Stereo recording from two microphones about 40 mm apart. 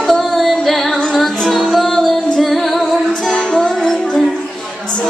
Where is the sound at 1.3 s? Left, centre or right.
Centre.